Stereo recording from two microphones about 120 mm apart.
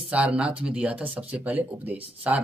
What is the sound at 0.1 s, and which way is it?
Speech, 10° right (ahead or behind).